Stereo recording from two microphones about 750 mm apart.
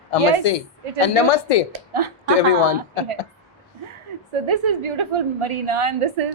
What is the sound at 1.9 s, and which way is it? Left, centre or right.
Speech, right.